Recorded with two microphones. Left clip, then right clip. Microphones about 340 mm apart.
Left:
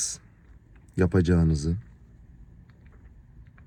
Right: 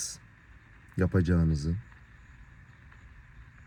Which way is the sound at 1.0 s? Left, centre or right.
Left.